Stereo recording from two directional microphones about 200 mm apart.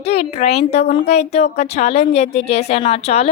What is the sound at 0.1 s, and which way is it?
Speech, 30° left (ahead or behind).